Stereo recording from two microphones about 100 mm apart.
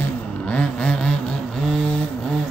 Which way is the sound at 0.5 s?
10° left (ahead or behind).